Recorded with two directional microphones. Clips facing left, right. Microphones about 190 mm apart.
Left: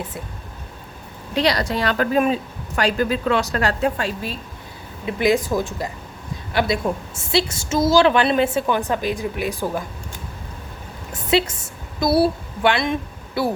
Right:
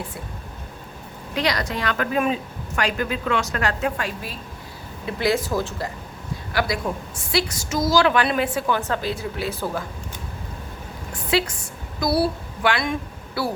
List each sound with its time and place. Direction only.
1.4 s a woman's voice: 30° left (ahead or behind)
5.0 s a woman's voice: 15° left (ahead or behind)
11.1 s a woman's voice: 25° left (ahead or behind)